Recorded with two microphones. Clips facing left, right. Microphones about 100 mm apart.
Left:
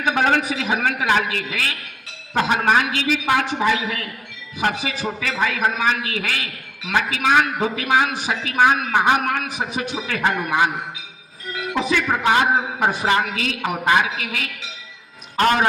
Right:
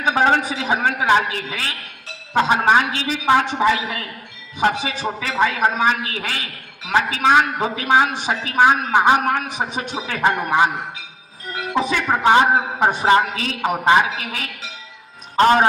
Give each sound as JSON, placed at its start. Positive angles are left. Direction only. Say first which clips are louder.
{"t": 0.0, "sound": "a man's voice", "louder": "right 2 dB", "side_deg": -30}
{"t": 11.8, "sound": "a woman's voice", "louder": "right 2 dB", "side_deg": -35}